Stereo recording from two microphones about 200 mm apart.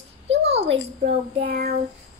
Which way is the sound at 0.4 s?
30° right (ahead or behind).